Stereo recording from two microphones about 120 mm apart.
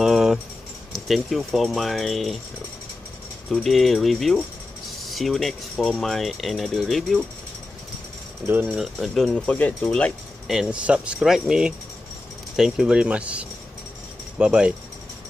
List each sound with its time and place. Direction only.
0.0 s a sound: 5° right (ahead or behind)
0.9 s speech: centre (ahead or behind)
3.4 s speech: centre (ahead or behind)
8.5 s speech: 15° right (ahead or behind)
8.7 s speech: centre (ahead or behind)
10.4 s speech: 5° right (ahead or behind)